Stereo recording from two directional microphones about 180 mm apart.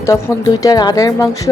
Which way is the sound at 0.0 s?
15° left (ahead or behind).